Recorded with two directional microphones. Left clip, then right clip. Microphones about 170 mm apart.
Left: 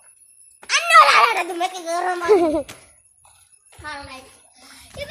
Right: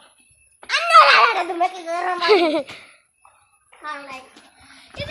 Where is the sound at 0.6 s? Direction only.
30° right (ahead or behind).